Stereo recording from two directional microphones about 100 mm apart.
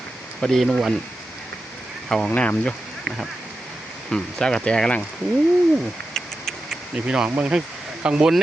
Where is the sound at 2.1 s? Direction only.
5° left (ahead or behind).